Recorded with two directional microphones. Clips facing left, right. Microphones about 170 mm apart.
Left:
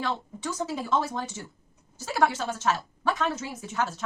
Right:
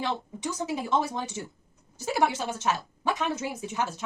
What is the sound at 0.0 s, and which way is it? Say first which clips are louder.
A woman's voice: even; 15° right (ahead or behind).